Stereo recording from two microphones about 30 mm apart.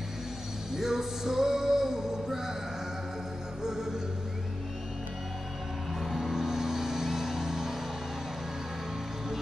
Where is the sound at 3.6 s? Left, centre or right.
Centre.